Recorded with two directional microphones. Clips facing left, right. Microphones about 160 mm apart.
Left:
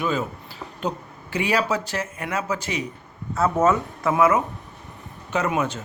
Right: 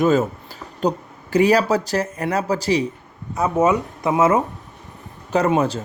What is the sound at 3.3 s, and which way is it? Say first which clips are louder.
Speech: right 2 dB; 15° right (ahead or behind).